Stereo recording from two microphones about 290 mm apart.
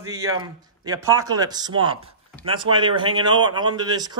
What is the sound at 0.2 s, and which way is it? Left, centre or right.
Speech, centre.